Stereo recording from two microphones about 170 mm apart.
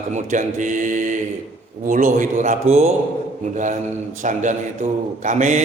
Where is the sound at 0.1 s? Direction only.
45° right (ahead or behind).